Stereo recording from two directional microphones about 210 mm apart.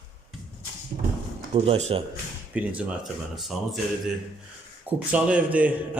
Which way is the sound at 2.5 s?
5° right (ahead or behind).